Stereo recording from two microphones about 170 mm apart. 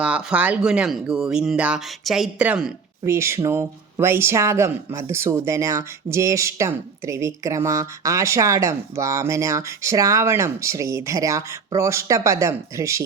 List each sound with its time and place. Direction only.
0.0 s speech: 5° right (ahead or behind)